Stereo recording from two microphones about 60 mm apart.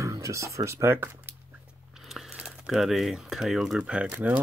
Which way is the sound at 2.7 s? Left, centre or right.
Centre.